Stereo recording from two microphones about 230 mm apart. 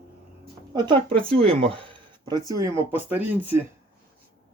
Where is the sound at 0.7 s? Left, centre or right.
Centre.